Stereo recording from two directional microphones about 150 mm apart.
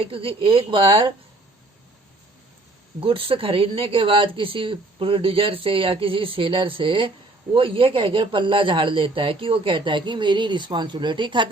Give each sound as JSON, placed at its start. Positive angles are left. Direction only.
{"t": 0.0, "sound": "speech", "side_deg": -40}
{"t": 3.0, "sound": "speech", "side_deg": -35}